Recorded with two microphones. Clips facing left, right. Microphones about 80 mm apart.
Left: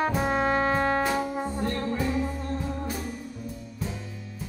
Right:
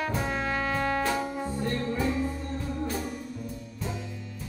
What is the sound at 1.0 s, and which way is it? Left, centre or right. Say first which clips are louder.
Music: left 2 dB; centre.